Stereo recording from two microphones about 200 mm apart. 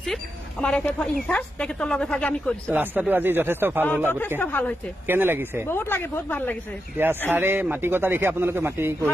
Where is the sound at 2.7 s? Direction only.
10° right (ahead or behind).